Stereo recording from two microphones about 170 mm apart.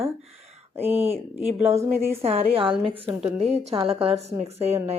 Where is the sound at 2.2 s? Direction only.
35° right (ahead or behind).